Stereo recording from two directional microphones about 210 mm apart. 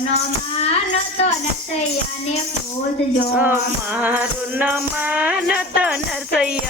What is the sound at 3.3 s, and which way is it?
Music, 10° right (ahead or behind).